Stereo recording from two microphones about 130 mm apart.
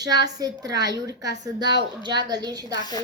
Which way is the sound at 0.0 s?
30° right (ahead or behind).